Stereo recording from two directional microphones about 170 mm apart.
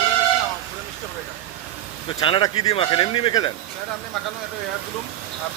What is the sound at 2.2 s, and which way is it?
Speech, 30° left (ahead or behind).